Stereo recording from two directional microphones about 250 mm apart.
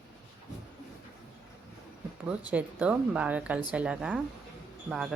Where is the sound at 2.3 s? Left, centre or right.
Centre.